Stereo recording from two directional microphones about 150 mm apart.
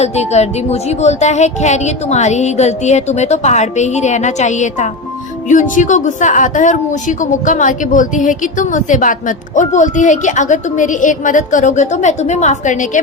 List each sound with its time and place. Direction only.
0.0 s a woman's voice: 45° left (ahead or behind)